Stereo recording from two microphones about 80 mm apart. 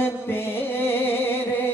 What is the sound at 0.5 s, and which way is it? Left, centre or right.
Music, left.